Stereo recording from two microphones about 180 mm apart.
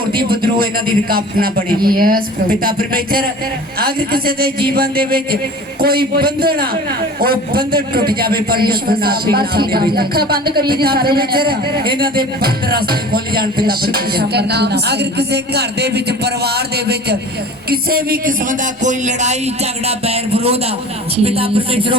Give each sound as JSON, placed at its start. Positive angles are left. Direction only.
{"t": 0.3, "sound": "a man's voice", "side_deg": -55}